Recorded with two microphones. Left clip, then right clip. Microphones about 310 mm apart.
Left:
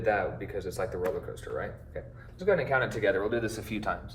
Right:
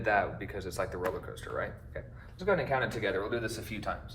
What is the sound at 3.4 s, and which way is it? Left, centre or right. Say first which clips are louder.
Speech: left 4 dB; left.